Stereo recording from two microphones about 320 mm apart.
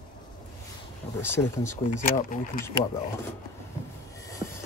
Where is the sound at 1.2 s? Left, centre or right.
Centre.